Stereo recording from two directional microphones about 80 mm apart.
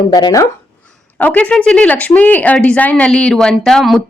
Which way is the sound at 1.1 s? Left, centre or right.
Centre.